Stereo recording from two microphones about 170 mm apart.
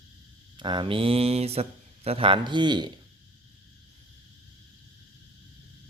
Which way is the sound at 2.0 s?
30° right (ahead or behind).